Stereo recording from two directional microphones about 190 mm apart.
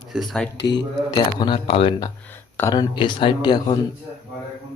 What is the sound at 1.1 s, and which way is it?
Speech, 25° left (ahead or behind).